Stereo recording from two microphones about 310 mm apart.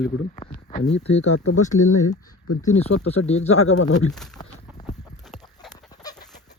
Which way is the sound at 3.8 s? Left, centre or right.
Left.